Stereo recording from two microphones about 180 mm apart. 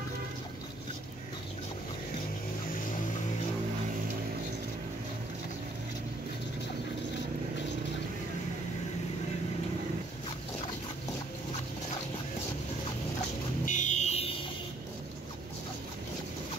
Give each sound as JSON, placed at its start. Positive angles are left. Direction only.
{"t": 13.7, "sound": "vehicle", "side_deg": 45}